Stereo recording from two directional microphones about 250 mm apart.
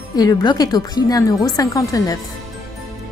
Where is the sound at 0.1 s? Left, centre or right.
Centre.